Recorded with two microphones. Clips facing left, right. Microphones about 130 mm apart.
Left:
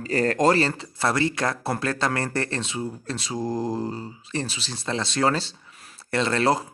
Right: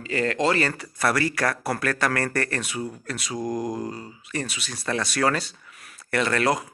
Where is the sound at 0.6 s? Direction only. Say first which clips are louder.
Left 1 dB; 25° left (ahead or behind).